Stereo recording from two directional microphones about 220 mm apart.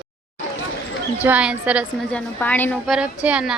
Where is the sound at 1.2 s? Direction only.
5° right (ahead or behind).